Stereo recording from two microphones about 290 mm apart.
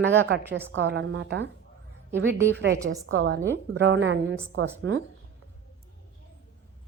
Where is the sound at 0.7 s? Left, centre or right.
Right.